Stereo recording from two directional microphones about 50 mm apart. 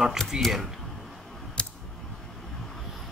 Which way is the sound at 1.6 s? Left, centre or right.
Centre.